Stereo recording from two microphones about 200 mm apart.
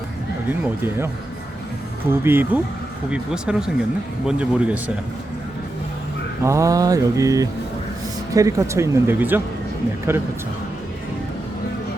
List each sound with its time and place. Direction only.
0.6 s speech: 10° right (ahead or behind)
6.4 s speech: 15° right (ahead or behind)